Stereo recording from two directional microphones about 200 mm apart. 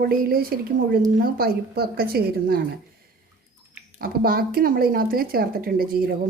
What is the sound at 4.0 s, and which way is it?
A woman's voice, 50° right (ahead or behind).